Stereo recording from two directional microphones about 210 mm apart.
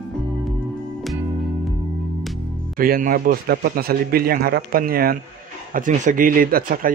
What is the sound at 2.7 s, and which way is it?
Speech, 45° right (ahead or behind).